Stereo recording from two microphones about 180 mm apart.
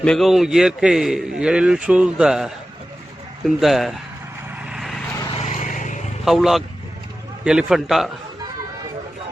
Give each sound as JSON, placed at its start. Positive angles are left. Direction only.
{"t": 0.0, "sound": "a man's voice", "side_deg": 0}
{"t": 4.6, "sound": "a sound", "side_deg": 0}
{"t": 5.4, "sound": "vehicle", "side_deg": 40}
{"t": 6.2, "sound": "a man's voice", "side_deg": 0}